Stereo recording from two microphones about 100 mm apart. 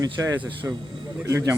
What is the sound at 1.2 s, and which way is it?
Speech, 25° right (ahead or behind).